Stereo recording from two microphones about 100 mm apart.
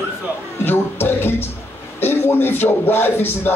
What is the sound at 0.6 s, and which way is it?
Speech, 20° left (ahead or behind).